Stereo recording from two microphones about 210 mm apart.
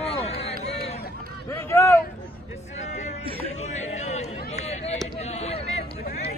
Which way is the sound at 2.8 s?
35° left (ahead or behind).